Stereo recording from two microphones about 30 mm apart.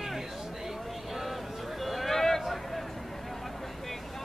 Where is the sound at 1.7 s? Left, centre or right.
Centre.